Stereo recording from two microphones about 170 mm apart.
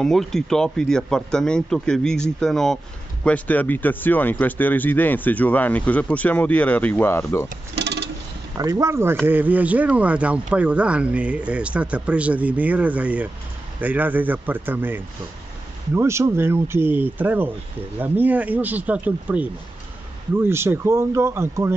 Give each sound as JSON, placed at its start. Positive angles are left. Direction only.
{"t": 0.0, "sound": "speech", "side_deg": 0}
{"t": 7.7, "sound": "a sound", "side_deg": -85}
{"t": 8.5, "sound": "speech", "side_deg": -20}